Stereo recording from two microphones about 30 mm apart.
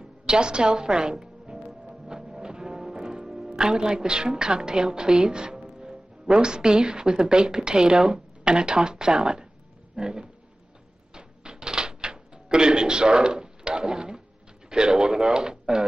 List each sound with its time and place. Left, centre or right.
0.3 s speech: right
2.3 s music: right
3.4 s speech: right
9.9 s a sound: right
11.1 s typewriter: right
14.7 s speech: right